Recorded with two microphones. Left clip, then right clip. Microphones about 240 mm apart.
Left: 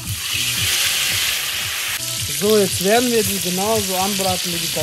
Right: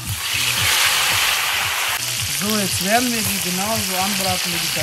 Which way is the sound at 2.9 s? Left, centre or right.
Right.